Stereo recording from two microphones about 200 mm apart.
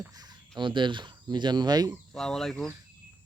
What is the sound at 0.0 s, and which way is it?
Speech, 20° right (ahead or behind).